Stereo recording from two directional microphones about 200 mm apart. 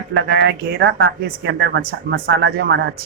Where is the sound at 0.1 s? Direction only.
60° right (ahead or behind).